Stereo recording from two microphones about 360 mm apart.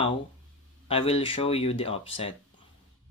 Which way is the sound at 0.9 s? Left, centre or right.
Centre.